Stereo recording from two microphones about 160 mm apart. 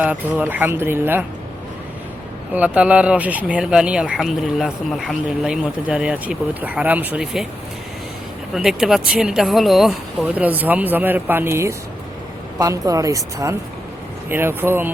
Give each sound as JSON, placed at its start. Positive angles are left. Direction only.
{"t": 0.0, "sound": "speech", "side_deg": -10}
{"t": 2.5, "sound": "speech", "side_deg": -10}
{"t": 8.5, "sound": "a woman's voice", "side_deg": -5}